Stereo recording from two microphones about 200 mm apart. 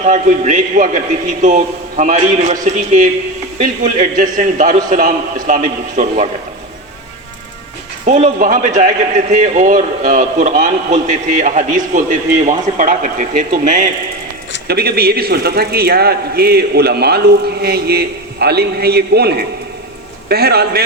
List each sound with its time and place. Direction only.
0.0 s a man's voice: 40° right (ahead or behind)
8.4 s a man's voice: 40° right (ahead or behind)
14.7 s a man's voice: 50° right (ahead or behind)